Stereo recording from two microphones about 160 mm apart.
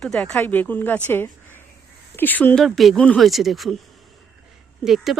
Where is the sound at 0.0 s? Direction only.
5° left (ahead or behind).